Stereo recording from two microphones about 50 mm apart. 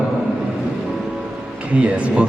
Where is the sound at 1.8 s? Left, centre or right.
Right.